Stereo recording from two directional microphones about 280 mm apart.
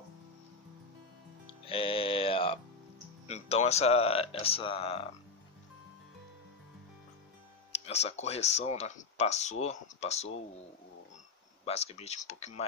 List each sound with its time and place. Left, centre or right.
1.7 s music: centre
3.3 s speech: left
7.7 s speech: left
11.6 s speech: left